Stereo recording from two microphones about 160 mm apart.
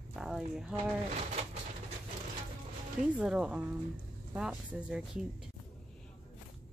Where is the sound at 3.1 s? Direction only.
5° right (ahead or behind).